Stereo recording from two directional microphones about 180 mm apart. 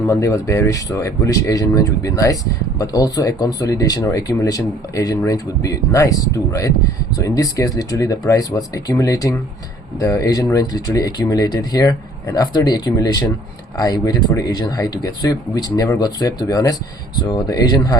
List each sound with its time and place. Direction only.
0.1 s speech: 15° left (ahead or behind)